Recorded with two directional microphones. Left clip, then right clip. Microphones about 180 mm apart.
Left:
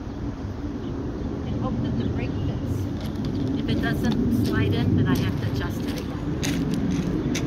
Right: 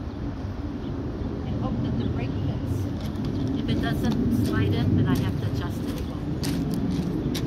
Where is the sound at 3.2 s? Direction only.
20° left (ahead or behind).